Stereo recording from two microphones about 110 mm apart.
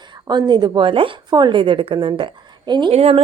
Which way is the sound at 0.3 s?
40° right (ahead or behind).